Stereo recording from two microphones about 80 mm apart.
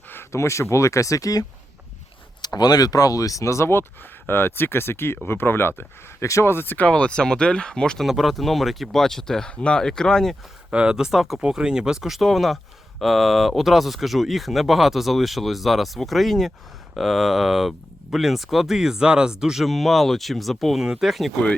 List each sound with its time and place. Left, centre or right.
0.1 s speech: left
2.4 s speech: left; by 8.0 s centre
8.0 s speech: centre
10.7 s speech: centre